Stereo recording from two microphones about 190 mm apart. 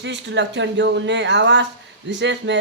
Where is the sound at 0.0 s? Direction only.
70° right (ahead or behind).